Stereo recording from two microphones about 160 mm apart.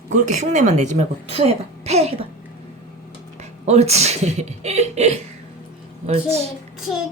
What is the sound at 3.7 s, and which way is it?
A child's voice, 40° right (ahead or behind).